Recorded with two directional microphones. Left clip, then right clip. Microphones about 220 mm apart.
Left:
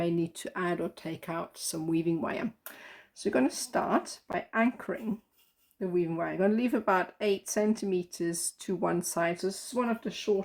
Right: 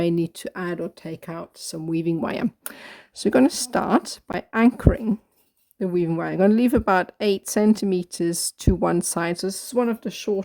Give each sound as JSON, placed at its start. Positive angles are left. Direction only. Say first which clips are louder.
{"t": 0.0, "sound": "speech", "louder": "right 7 dB", "side_deg": -50}